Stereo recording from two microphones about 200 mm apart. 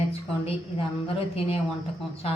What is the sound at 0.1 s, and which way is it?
A woman's voice, 30° left (ahead or behind).